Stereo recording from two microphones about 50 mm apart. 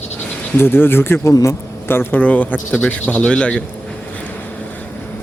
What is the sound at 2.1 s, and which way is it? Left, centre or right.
A man's voice, left.